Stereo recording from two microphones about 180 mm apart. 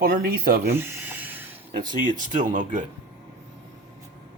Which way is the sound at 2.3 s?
45° right (ahead or behind).